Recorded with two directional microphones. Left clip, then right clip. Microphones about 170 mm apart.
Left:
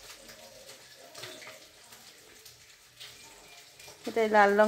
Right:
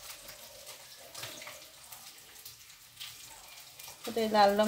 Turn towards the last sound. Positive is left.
turn(degrees=30)  # may be behind; listen again after turning